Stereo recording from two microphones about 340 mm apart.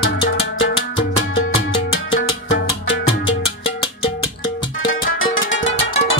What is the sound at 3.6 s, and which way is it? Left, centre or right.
Music, centre.